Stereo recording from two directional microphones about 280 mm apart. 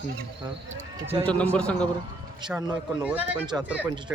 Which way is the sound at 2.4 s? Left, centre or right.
Centre.